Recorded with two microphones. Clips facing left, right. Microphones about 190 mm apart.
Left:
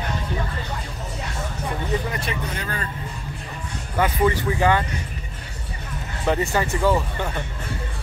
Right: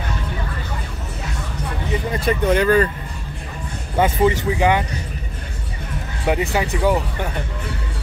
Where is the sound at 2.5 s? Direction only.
80° right.